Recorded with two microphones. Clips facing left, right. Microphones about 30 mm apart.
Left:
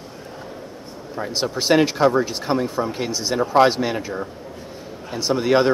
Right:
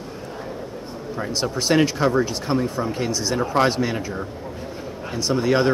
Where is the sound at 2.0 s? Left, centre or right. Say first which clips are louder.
Left 2 dB; centre.